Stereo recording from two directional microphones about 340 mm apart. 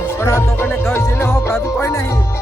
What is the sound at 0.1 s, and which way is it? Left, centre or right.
Music, centre.